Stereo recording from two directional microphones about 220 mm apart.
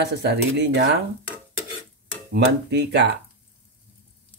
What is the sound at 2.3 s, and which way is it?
Speech, 50° right (ahead or behind).